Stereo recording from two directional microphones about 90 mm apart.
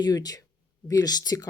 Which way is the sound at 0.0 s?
50° left (ahead or behind).